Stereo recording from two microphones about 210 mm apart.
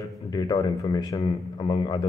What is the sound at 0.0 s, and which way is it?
Speech, 20° left (ahead or behind).